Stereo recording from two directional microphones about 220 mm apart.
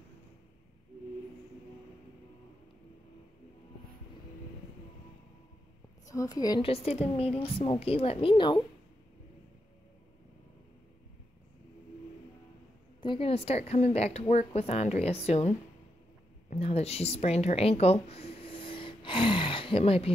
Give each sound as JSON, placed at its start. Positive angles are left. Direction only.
{"t": 6.0, "sound": "speech", "side_deg": 15}
{"t": 13.0, "sound": "a woman's voice", "side_deg": 25}